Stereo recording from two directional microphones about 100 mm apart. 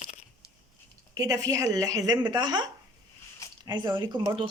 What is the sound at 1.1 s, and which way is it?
Speech, 35° right (ahead or behind).